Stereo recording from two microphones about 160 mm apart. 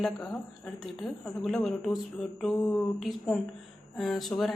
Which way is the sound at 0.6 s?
Centre (ahead or behind).